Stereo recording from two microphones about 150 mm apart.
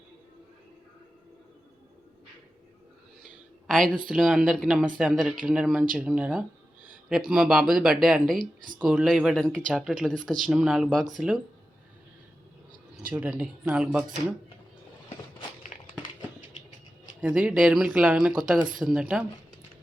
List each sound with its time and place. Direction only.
3.7 s speech: 5° left (ahead or behind)
13.1 s speech: 5° right (ahead or behind)
15.6 s a sound: 60° left (ahead or behind)
17.2 s speech: 10° right (ahead or behind)